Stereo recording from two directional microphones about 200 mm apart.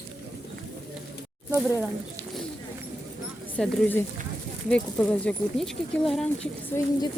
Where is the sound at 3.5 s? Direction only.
10° left (ahead or behind).